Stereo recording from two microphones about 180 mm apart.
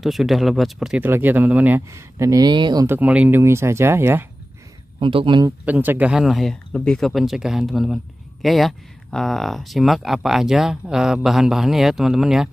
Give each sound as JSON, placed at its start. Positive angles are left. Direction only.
{"t": 0.0, "sound": "speech", "side_deg": 0}
{"t": 4.9, "sound": "speech", "side_deg": -30}
{"t": 5.7, "sound": "speech", "side_deg": -10}